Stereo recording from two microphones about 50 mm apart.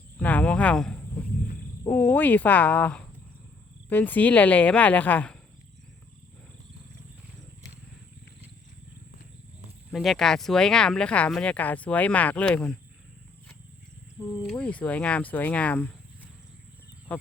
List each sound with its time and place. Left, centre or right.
0.2 s speech: left
0.9 s a sound: left
1.9 s a woman's voice: left
9.9 s speech: centre; by 11.3 s left
11.5 s speech: left
14.6 s speech: left